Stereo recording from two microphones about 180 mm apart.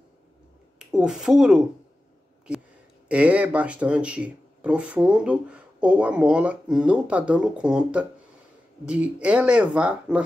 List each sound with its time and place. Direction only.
0.7 s speech: 5° right (ahead or behind)
3.1 s speech: 5° right (ahead or behind)